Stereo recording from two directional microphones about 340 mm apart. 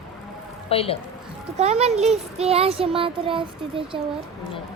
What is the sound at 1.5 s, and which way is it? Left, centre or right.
A child's voice, centre.